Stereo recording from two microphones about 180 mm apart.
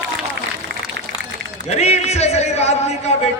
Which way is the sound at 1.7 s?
35° left (ahead or behind).